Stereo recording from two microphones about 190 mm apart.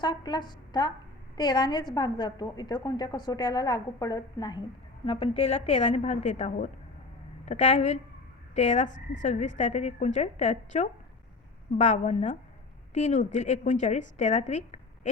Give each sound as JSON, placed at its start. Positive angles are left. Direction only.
{"t": 0.0, "sound": "a woman's voice", "side_deg": 20}